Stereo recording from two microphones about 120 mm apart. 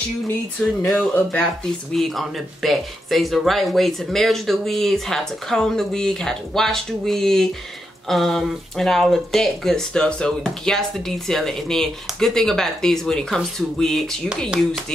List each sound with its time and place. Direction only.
0.9 s speech: 10° left (ahead or behind)